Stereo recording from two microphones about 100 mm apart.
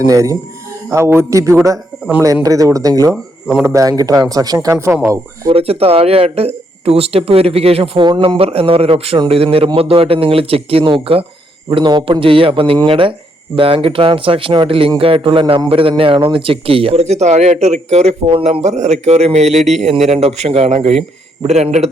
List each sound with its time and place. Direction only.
0.0 s a man's voice: 35° right (ahead or behind)
3.4 s speech: 5° right (ahead or behind)
3.7 s speech: 35° right (ahead or behind)
4.7 s a man's voice: 25° right (ahead or behind)
5.5 s speech: 75° right (ahead or behind)
8.0 s speech: 50° right (ahead or behind)
8.4 s speech: 75° right (ahead or behind)
11.7 s speech: 50° right (ahead or behind); by 21.8 s 90° right